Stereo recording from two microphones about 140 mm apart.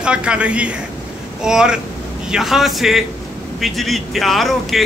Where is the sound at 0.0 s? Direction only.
5° right (ahead or behind).